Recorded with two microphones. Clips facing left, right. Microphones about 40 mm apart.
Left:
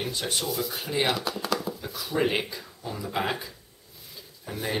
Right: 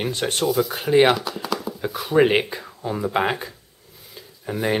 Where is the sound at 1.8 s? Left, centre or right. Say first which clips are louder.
Right 13 dB; right.